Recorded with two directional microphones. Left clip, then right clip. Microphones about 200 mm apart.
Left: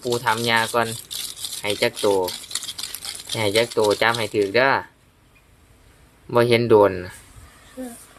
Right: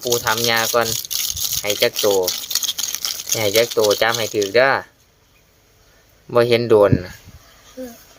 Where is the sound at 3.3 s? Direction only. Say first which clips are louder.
Right 3 dB; 10° right (ahead or behind).